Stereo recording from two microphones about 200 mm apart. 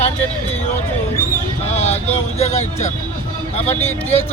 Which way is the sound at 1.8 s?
35° left (ahead or behind).